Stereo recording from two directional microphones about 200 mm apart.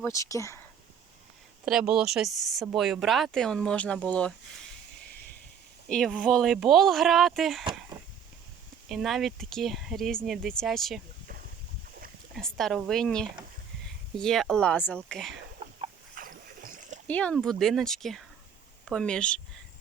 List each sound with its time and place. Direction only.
0.0 s speech: 15° left (ahead or behind)
1.6 s speech: 5° right (ahead or behind)
5.9 s speech: 5° left (ahead or behind)
8.9 s speech: centre (ahead or behind)
12.3 s speech: centre (ahead or behind)
16.1 s a sound: 45° right (ahead or behind)
17.1 s speech: 5° left (ahead or behind)